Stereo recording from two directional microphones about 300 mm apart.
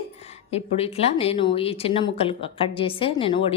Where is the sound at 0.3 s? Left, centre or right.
Centre.